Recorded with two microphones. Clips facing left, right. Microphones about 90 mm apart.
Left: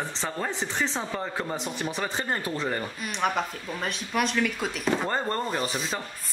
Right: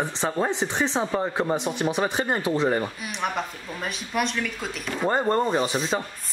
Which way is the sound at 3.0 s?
Centre (ahead or behind).